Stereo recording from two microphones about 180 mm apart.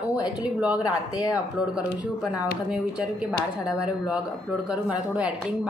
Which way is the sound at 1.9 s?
20° left (ahead or behind).